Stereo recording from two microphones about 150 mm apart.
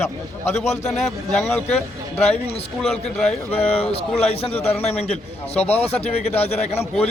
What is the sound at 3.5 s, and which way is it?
A man's voice, 40° left (ahead or behind).